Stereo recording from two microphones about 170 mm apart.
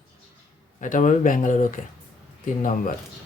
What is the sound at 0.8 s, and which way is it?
Speech, 50° left (ahead or behind).